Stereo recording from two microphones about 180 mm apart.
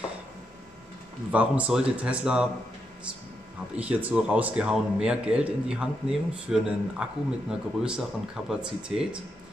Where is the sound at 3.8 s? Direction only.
10° right (ahead or behind).